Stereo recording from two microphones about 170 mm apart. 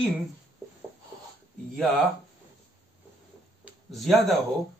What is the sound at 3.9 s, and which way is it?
Speech, centre (ahead or behind).